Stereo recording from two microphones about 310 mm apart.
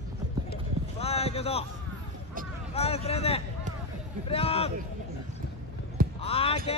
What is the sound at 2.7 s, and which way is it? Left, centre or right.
Speech, centre.